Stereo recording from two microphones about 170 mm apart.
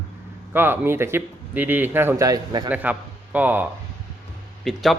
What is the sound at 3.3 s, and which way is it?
Speech, 10° right (ahead or behind).